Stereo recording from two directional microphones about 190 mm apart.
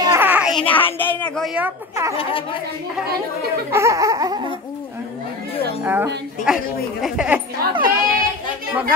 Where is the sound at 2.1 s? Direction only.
30° left (ahead or behind).